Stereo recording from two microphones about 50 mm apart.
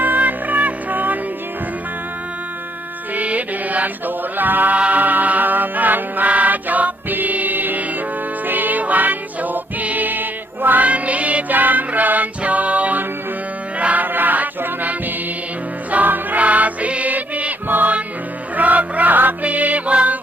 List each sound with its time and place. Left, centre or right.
0.0 s music: right
3.2 s music: right
10.8 s music: right